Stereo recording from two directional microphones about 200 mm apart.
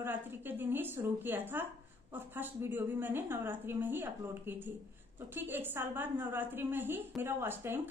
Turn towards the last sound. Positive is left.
turn(degrees=-10)  # may be behind; listen again after turning